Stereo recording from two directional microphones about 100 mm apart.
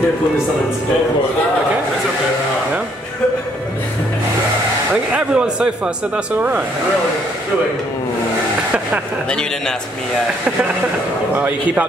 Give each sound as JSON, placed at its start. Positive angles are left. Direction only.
{"t": 5.1, "sound": "a man's voice", "side_deg": -10}
{"t": 9.3, "sound": "a man's voice", "side_deg": 10}
{"t": 11.3, "sound": "a man's voice", "side_deg": -15}